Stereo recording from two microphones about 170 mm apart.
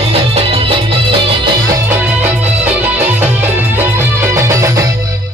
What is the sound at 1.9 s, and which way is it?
Music, 10° right (ahead or behind).